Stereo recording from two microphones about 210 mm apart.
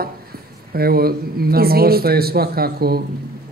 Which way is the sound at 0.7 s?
45° right (ahead or behind).